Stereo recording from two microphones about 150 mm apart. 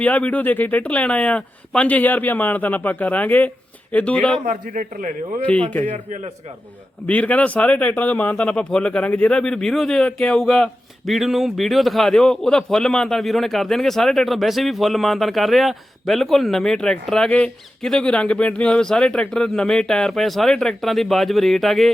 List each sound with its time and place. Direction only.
0.0 s speech: 10° left (ahead or behind)
4.4 s a man's voice: 60° right (ahead or behind)
7.1 s speech: 10° left (ahead or behind)